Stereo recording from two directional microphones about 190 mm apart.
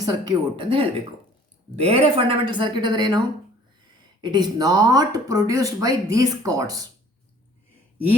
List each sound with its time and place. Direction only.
0.0 s speech: 25° right (ahead or behind)
4.2 s speech: 20° right (ahead or behind)